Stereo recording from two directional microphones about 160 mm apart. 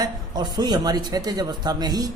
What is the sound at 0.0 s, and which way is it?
A man's voice, 25° right (ahead or behind).